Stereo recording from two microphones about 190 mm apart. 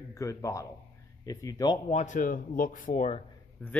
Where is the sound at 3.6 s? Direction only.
10° left (ahead or behind).